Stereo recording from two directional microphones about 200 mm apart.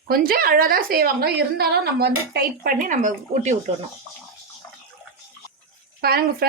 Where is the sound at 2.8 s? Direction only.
40° right (ahead or behind).